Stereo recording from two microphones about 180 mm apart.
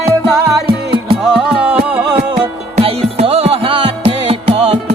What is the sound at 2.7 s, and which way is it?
Music, 35° right (ahead or behind).